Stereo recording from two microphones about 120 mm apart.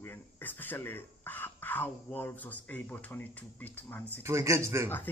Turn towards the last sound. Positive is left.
turn(degrees=15)  # may be behind; listen again after turning